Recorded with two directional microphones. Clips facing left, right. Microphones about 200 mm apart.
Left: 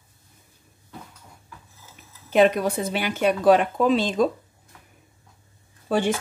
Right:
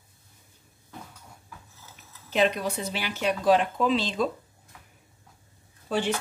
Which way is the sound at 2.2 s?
50° left (ahead or behind).